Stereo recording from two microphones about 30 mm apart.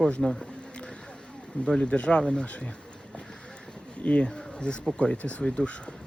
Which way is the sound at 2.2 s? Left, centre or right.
Left.